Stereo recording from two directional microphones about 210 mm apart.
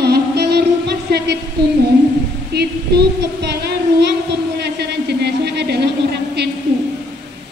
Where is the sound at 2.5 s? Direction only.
50° right (ahead or behind).